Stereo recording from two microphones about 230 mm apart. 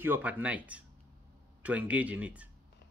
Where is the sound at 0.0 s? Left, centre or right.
Centre.